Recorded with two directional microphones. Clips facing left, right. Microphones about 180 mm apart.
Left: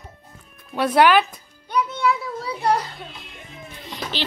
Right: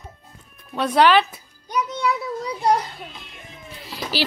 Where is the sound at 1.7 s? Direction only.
15° right (ahead or behind).